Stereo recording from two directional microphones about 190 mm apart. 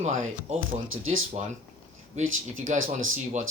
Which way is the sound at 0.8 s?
90° right.